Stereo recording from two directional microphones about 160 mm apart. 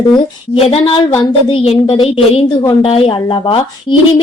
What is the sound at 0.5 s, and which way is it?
A woman's voice, 35° left (ahead or behind).